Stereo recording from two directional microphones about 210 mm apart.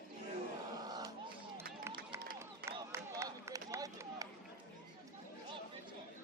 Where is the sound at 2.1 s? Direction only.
10° right (ahead or behind).